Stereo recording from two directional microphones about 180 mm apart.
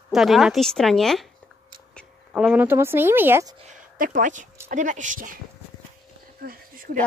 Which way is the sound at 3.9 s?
50° right (ahead or behind).